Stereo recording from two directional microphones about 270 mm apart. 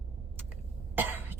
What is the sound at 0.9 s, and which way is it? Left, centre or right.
Cough, centre.